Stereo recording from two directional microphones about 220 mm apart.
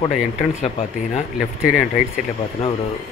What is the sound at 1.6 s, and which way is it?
Speech, 5° right (ahead or behind).